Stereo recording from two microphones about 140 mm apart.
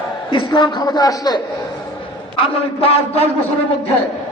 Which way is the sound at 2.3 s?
45° left (ahead or behind).